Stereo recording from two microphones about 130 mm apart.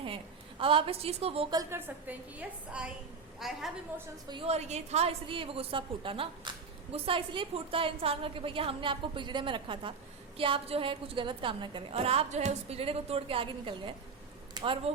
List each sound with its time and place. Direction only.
0.6 s a woman's voice: 45° right (ahead or behind)
1.7 s a woman's voice: 10° right (ahead or behind)
4.4 s a woman's voice: 55° right (ahead or behind); by 14.9 s 40° right (ahead or behind)